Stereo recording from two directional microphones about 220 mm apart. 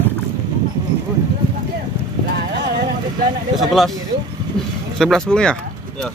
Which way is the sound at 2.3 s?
50° right (ahead or behind).